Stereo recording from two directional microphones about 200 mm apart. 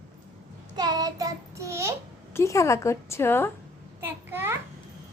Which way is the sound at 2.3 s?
15° left (ahead or behind).